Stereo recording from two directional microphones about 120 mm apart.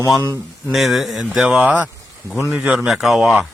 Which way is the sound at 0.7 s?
Centre (ahead or behind).